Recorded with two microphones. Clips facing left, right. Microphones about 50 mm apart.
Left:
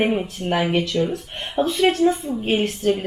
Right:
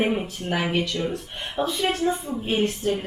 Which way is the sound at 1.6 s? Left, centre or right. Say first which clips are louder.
Left 5 dB; left.